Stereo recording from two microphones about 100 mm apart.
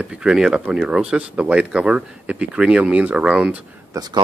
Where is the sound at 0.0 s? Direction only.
10° right (ahead or behind).